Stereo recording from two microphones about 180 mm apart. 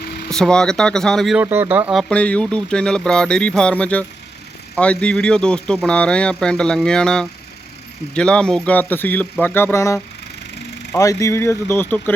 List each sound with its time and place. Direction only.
0.3 s speech: 5° left (ahead or behind)